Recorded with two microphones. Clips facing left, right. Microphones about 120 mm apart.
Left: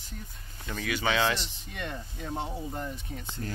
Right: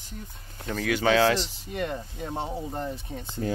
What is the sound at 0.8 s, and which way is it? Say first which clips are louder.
Speech: right 6 dB; 90° right.